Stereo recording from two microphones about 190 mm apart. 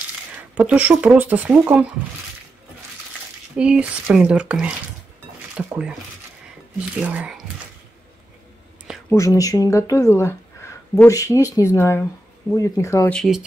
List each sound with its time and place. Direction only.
0.4 s speech: 10° right (ahead or behind)
3.5 s speech: 5° right (ahead or behind)
7.0 s speech: 5° right (ahead or behind)
9.1 s speech: 15° left (ahead or behind)
13.1 s speech: centre (ahead or behind)